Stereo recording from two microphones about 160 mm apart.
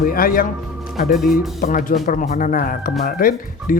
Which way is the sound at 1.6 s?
55° left (ahead or behind).